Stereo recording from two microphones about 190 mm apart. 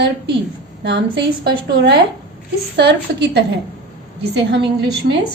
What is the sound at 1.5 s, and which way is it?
A woman's voice, 55° right (ahead or behind).